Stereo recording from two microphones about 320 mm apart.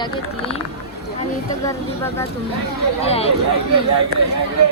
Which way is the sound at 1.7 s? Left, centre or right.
Centre.